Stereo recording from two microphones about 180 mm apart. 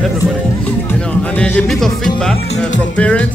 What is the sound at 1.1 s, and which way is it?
Speech, 5° left (ahead or behind).